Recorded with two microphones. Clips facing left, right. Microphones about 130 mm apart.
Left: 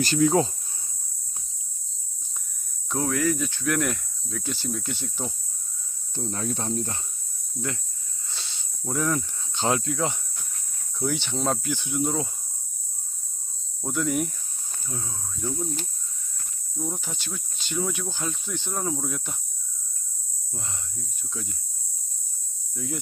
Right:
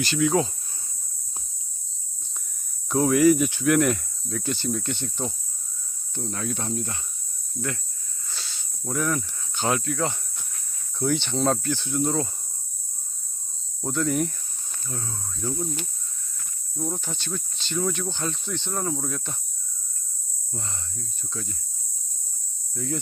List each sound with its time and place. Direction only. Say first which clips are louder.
0.0 s speech: left 2 dB; 40° left (ahead or behind)
2.9 s cricket: right 7 dB; 5° right (ahead or behind)
3.7 s speech: right 5 dB; centre (ahead or behind)
6.1 s speech: left 1 dB; 30° left (ahead or behind)
8.3 s snake: right 1 dB; 25° left (ahead or behind)
8.8 s speech: even; 20° left (ahead or behind)
11.0 s speech: right 3 dB; 5° left (ahead or behind)
13.8 s speech: right 1 dB; 5° left (ahead or behind)
16.7 s speech: right 2 dB; centre (ahead or behind)
20.5 s speech: right 2 dB; 10° left (ahead or behind)
22.7 s speech: right 3 dB; 5° left (ahead or behind)